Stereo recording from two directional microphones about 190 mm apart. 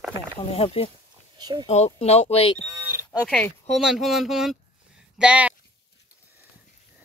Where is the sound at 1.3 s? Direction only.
20° right (ahead or behind).